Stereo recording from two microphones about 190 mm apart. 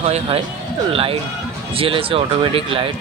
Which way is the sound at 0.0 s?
30° right (ahead or behind).